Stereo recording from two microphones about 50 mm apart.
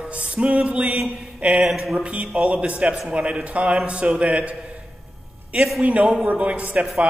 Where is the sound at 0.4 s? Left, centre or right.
Right.